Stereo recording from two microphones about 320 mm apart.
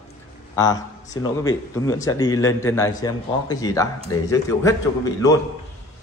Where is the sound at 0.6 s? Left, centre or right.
Centre.